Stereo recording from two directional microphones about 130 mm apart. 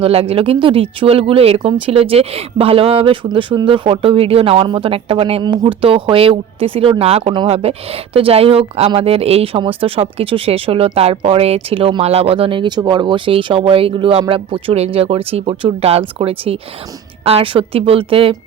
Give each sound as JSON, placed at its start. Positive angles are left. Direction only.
{"t": 0.0, "sound": "speech", "side_deg": -50}